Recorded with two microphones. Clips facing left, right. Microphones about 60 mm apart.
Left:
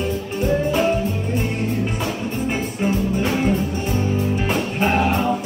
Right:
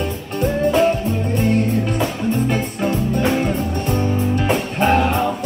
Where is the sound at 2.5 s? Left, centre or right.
Centre.